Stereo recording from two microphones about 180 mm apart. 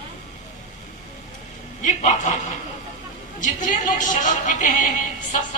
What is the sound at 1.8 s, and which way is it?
Speech, 45° left (ahead or behind).